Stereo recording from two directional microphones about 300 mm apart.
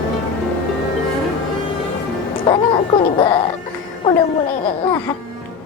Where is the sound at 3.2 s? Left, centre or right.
Centre.